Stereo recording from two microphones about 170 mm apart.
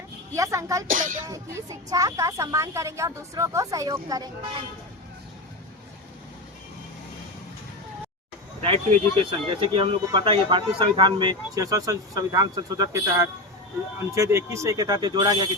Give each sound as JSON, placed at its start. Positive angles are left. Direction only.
{"t": 0.3, "sound": "speech", "side_deg": -20}
{"t": 0.9, "sound": "speech", "side_deg": -50}
{"t": 1.3, "sound": "speech", "side_deg": -15}
{"t": 9.1, "sound": "speech", "side_deg": -30}